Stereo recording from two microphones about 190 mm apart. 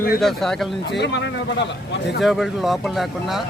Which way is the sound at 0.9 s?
65° left (ahead or behind).